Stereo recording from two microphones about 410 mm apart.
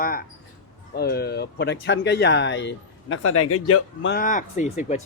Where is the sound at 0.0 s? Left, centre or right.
Left.